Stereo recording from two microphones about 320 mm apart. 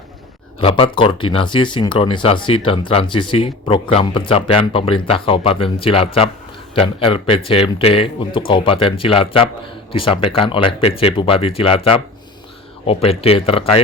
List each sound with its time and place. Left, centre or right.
0.6 s speech: centre